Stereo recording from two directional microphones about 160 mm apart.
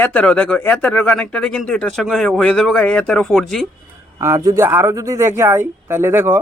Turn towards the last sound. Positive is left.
turn(degrees=-15)  # may be behind; listen again after turning